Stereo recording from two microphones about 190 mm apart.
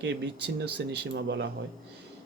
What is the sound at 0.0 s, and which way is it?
Speech, 65° right (ahead or behind).